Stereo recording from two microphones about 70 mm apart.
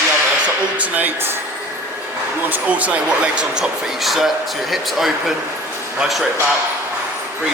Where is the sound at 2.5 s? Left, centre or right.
Centre.